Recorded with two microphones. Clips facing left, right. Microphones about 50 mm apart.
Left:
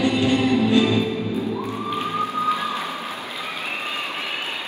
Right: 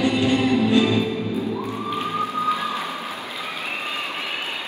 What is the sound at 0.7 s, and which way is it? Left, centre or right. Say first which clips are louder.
Music: even; right.